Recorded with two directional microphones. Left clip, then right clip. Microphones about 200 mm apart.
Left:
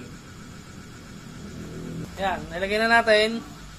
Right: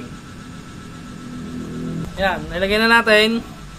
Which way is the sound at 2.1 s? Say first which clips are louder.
Right 7 dB; 25° right (ahead or behind).